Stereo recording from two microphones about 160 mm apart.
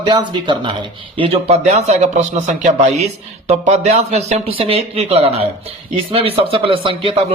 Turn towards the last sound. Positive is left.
turn(degrees=-35)  # may be behind; listen again after turning